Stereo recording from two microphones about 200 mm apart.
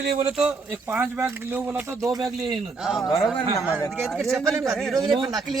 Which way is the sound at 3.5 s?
15° left (ahead or behind).